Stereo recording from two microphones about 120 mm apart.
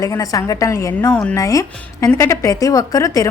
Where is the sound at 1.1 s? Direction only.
10° left (ahead or behind).